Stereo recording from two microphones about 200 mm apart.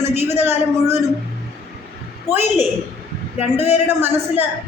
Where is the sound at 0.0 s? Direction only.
35° left (ahead or behind).